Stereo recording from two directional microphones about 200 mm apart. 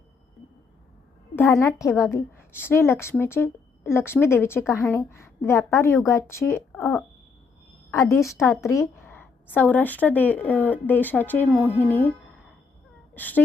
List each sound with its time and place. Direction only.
1.4 s a woman's voice: 15° left (ahead or behind)
13.1 s speech: 10° left (ahead or behind)